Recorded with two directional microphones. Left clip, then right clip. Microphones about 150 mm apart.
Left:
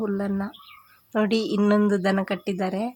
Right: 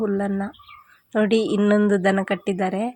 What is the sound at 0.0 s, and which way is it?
A woman's voice, 10° right (ahead or behind).